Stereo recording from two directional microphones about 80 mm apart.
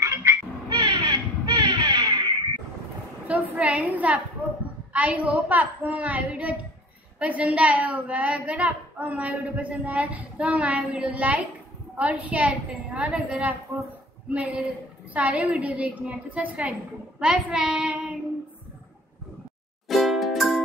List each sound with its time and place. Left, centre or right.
0.0 s cat: right
0.7 s crow: right
3.3 s a woman's voice: centre
19.9 s music: centre